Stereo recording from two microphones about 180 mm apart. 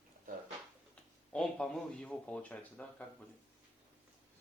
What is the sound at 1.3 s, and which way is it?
Speech, 5° left (ahead or behind).